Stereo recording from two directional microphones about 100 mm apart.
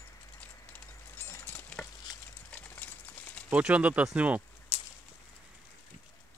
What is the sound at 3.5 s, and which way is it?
Speech, 15° right (ahead or behind).